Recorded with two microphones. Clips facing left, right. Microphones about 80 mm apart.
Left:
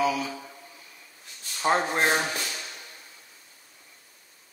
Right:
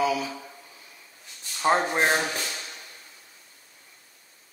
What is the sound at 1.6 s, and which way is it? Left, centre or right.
Speech, centre.